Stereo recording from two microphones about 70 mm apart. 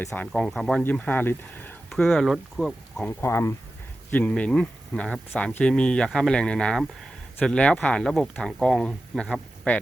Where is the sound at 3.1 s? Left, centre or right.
Left.